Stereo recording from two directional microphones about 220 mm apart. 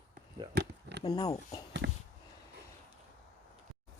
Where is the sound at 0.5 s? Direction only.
50° right (ahead or behind).